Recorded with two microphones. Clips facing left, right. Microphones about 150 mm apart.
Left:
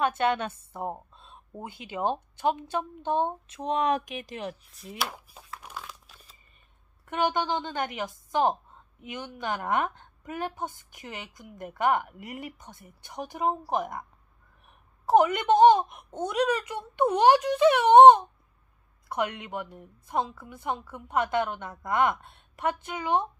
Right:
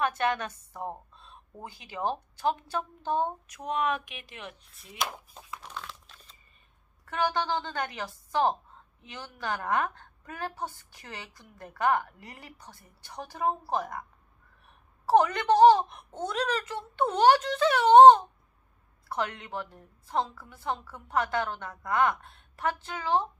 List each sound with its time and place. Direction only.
0.0 s a woman's voice: 25° left (ahead or behind)
5.1 s tearing: 10° left (ahead or behind)
7.1 s a woman's voice: 20° left (ahead or behind)